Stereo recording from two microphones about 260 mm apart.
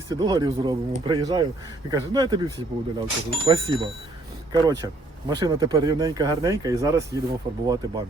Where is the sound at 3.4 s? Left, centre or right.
Centre.